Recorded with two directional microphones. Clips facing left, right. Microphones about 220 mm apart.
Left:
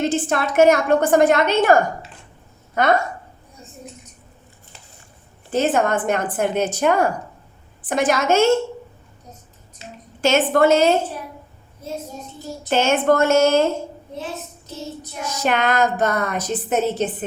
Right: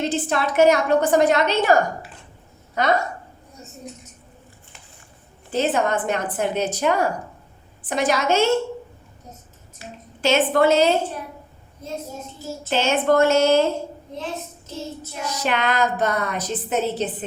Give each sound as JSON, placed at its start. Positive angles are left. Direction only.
{"t": 0.0, "sound": "a woman's voice", "side_deg": 50}
{"t": 2.8, "sound": "a woman's voice", "side_deg": 50}
{"t": 5.5, "sound": "a woman's voice", "side_deg": 50}
{"t": 9.8, "sound": "a woman's voice", "side_deg": 20}
{"t": 10.2, "sound": "a woman's voice", "side_deg": 45}
{"t": 12.7, "sound": "a woman's voice", "side_deg": 50}
{"t": 15.3, "sound": "a woman's voice", "side_deg": 45}